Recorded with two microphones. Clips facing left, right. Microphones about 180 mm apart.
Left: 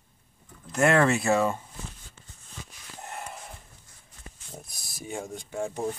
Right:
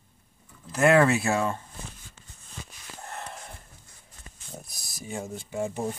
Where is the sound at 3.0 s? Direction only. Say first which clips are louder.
Even; 10° left (ahead or behind).